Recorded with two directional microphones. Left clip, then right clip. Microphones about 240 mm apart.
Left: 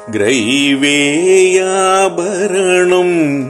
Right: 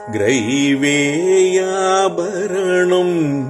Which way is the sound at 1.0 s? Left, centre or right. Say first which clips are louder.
Left 5 dB; centre.